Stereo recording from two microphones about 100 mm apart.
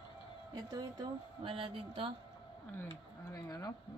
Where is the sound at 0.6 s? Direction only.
40° right (ahead or behind).